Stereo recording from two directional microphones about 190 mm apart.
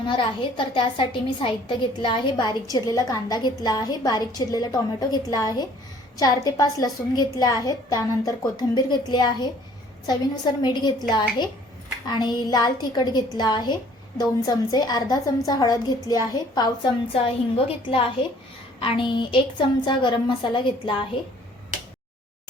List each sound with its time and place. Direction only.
0.2 s a woman's voice: 25° left (ahead or behind)